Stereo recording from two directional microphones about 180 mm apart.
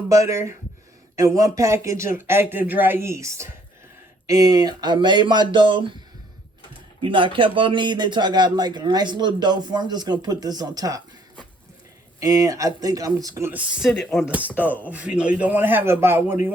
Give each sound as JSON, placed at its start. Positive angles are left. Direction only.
{"t": 0.1, "sound": "a man's voice", "side_deg": -15}
{"t": 7.0, "sound": "a man's voice", "side_deg": -30}